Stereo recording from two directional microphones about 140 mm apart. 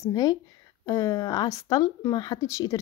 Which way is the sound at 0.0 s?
25° left (ahead or behind).